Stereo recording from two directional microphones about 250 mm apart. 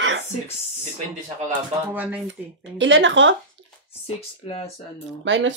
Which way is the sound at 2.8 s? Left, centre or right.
Right.